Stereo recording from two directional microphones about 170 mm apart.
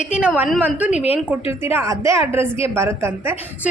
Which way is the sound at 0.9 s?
35° left (ahead or behind).